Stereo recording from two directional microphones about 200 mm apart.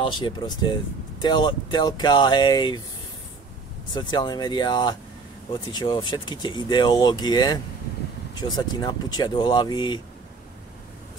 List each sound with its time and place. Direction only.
0.0 s speech: 25° left (ahead or behind)
3.9 s speech: 20° left (ahead or behind)
8.7 s speech: 20° left (ahead or behind)